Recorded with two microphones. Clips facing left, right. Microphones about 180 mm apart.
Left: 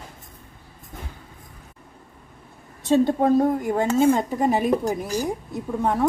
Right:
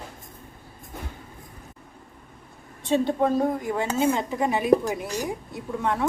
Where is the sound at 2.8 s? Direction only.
45° left (ahead or behind).